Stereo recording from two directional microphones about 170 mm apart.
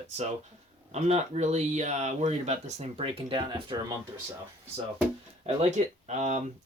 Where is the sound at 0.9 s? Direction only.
40° right (ahead or behind).